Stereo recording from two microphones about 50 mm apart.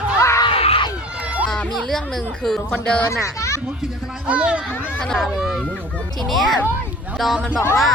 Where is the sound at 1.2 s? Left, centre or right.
Right.